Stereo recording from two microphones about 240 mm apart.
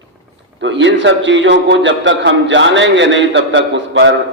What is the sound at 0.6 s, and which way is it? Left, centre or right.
A man's voice, right.